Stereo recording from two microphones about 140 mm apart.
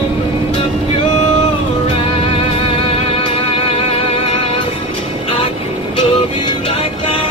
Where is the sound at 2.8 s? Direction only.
40° left (ahead or behind).